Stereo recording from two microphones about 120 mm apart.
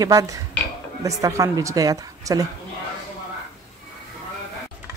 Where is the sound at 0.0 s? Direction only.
30° right (ahead or behind).